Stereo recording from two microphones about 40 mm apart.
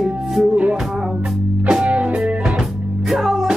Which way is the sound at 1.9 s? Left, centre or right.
Right.